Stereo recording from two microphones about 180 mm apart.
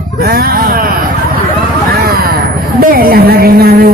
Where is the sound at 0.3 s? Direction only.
55° right (ahead or behind).